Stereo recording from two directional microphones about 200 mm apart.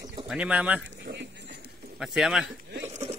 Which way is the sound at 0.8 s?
60° right (ahead or behind).